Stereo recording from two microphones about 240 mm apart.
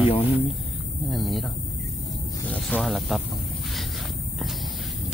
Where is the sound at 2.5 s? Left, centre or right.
Centre.